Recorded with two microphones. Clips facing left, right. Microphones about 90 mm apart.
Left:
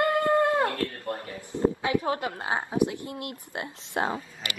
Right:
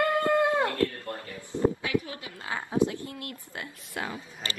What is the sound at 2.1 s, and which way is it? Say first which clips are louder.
Speech: left 11 dB; 60° left (ahead or behind).